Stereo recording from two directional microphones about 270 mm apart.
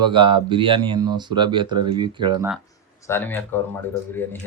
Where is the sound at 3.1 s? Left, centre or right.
Centre.